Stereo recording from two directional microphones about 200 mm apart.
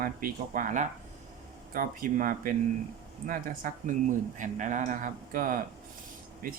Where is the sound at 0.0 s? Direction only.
45° right (ahead or behind).